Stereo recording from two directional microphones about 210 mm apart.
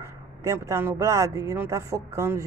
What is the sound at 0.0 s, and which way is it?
Speech, 15° right (ahead or behind).